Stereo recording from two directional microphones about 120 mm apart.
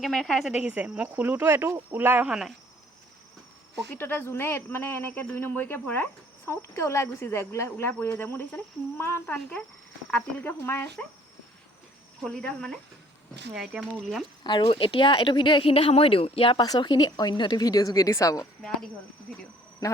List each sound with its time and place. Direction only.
0.0 s speech: centre (ahead or behind); by 2.3 s 15° right (ahead or behind)
3.9 s speech: 15° left (ahead or behind)
12.2 s speech: 5° left (ahead or behind)
13.5 s speech: 5° right (ahead or behind)
14.4 s speech: 40° left (ahead or behind)
16.6 s speech: 35° left (ahead or behind)